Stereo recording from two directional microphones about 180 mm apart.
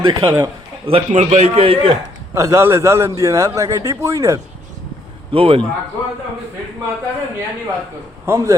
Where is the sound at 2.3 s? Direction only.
15° right (ahead or behind).